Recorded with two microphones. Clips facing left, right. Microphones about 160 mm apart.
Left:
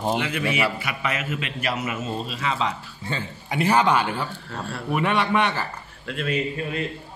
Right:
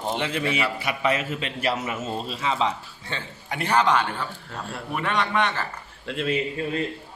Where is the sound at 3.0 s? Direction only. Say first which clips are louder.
Left 3 dB; 5° left (ahead or behind).